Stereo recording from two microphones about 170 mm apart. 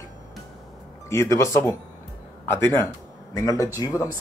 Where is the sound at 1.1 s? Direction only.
15° left (ahead or behind).